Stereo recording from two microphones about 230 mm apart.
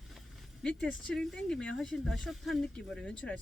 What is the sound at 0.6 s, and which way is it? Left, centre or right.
Speech, centre.